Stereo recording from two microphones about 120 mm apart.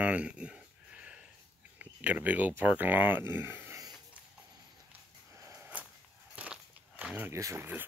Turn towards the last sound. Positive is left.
turn(degrees=-20)  # may be behind; listen again after turning